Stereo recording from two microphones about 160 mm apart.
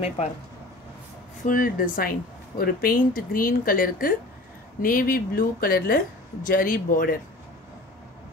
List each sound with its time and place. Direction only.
1.4 s speech: 60° left (ahead or behind)